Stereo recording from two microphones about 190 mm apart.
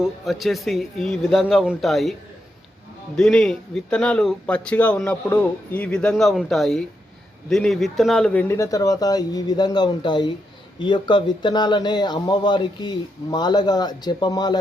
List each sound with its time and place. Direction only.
0.0 s a man's voice: centre (ahead or behind)
3.2 s a man's voice: 5° left (ahead or behind); by 14.6 s 20° left (ahead or behind)